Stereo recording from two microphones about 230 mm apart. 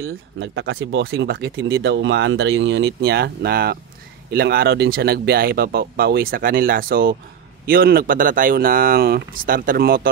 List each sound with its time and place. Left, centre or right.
0.0 s speech: right